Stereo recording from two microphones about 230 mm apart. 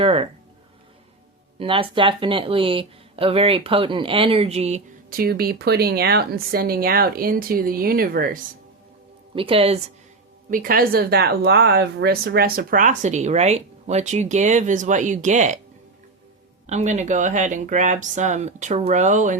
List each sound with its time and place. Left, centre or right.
0.0 s speech: right
1.5 s speech: right
9.3 s speech: right
10.5 s speech: right
16.6 s speech: right